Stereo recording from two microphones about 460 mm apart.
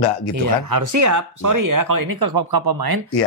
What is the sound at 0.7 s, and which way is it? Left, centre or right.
Speech, right.